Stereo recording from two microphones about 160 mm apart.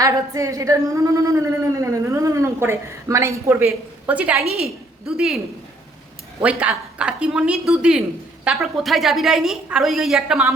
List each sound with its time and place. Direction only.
0.0 s a woman's voice: 20° right (ahead or behind); by 5.4 s 5° right (ahead or behind)
6.4 s a woman's voice: 5° right (ahead or behind)